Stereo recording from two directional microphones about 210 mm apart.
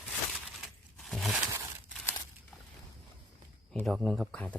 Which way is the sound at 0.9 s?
Centre (ahead or behind).